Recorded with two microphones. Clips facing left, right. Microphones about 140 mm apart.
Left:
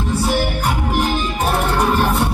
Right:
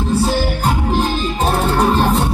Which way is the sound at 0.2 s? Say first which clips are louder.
Right 2 dB; 30° right (ahead or behind).